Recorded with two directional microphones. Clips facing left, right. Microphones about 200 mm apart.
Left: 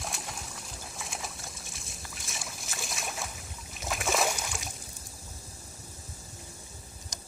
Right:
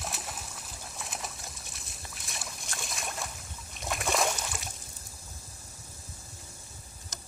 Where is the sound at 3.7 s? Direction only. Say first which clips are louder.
Even; centre (ahead or behind).